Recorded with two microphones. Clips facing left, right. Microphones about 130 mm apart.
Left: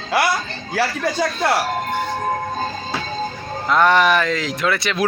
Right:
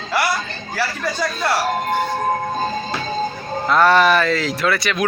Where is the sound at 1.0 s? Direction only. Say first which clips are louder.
Left 2 dB; 60° left (ahead or behind).